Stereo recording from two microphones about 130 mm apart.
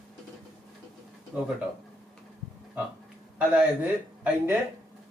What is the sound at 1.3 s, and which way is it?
Speech, 10° right (ahead or behind).